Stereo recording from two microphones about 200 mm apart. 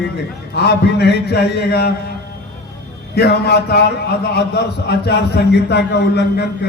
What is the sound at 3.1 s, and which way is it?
A man's voice, 55° left (ahead or behind).